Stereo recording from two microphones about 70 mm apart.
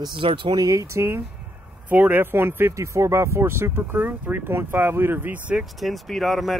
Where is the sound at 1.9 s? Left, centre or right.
Right.